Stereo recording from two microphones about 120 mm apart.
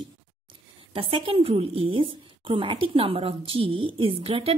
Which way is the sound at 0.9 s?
45° right (ahead or behind).